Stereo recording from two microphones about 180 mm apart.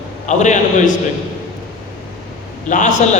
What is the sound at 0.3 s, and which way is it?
Speech, 40° left (ahead or behind).